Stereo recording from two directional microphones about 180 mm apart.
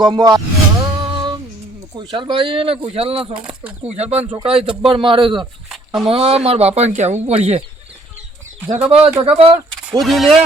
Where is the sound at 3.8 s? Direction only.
35° right (ahead or behind).